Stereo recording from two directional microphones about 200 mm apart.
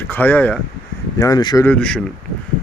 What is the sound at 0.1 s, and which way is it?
Speech, 10° left (ahead or behind).